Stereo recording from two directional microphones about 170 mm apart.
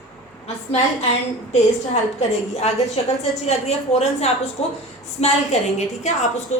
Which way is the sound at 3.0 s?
35° left (ahead or behind).